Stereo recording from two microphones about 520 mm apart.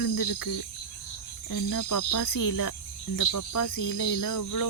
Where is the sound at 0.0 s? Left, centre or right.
Left.